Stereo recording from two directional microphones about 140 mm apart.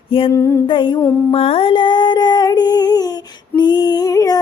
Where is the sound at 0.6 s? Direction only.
35° left (ahead or behind).